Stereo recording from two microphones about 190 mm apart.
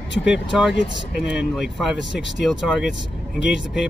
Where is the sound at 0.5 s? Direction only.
Centre (ahead or behind).